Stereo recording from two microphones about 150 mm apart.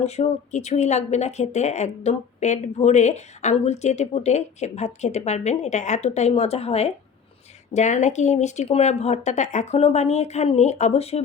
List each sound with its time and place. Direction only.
0.0 s speech: 45° left (ahead or behind)